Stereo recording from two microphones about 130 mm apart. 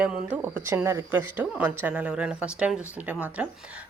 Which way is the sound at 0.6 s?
20° right (ahead or behind).